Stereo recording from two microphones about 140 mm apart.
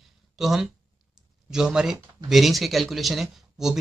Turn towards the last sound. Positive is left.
turn(degrees=0)  # may be behind; listen again after turning